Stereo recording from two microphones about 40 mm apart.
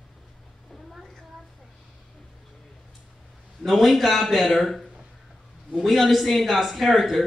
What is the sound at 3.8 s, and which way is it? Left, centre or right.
A man's voice, centre.